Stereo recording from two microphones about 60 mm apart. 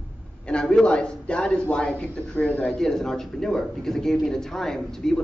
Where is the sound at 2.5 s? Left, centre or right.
Left.